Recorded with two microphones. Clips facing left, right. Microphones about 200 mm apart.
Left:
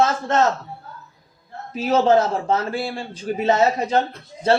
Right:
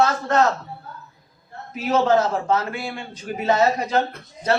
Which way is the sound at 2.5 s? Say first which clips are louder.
Left 1 dB; 35° left (ahead or behind).